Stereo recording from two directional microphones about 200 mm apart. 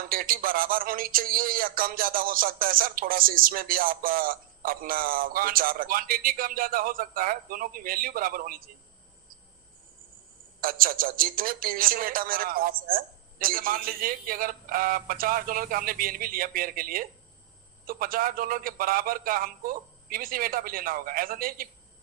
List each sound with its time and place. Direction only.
0.0 s speech: 45° right (ahead or behind)
10.6 s speech: 45° right (ahead or behind)